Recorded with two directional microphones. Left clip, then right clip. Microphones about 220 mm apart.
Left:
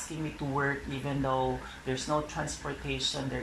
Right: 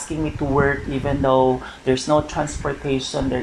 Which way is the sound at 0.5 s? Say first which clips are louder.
Right 12 dB; 35° right (ahead or behind).